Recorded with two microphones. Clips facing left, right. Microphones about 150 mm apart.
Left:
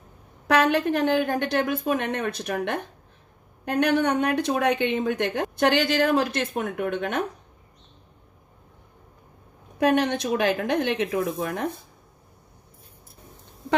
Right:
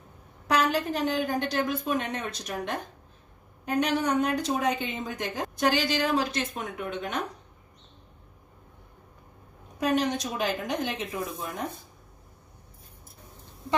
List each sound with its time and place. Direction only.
0.5 s speech: 60° left (ahead or behind)
9.8 s a woman's voice: 60° left (ahead or behind)